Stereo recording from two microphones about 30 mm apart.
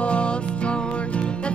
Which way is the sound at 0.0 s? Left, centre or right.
Left.